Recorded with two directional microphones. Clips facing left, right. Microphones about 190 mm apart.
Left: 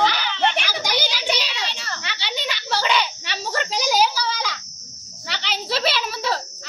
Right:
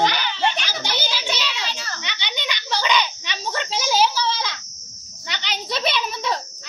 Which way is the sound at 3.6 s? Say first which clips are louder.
Left 2 dB; 40° left (ahead or behind).